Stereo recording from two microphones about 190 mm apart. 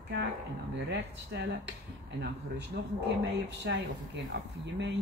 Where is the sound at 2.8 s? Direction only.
60° right (ahead or behind).